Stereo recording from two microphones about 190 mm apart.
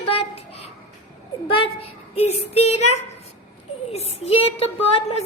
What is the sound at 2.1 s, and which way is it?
Speech, 35° left (ahead or behind).